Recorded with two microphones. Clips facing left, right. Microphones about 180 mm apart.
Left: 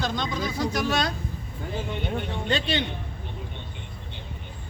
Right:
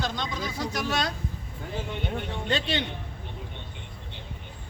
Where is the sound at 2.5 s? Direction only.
90° left.